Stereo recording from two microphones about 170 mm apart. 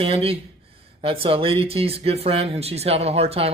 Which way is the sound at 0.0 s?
35° right (ahead or behind).